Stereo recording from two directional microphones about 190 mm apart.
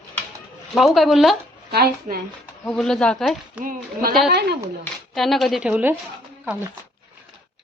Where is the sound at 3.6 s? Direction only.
45° right (ahead or behind).